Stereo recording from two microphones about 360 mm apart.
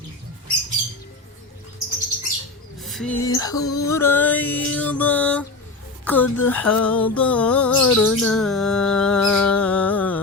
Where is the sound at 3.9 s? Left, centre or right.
Centre.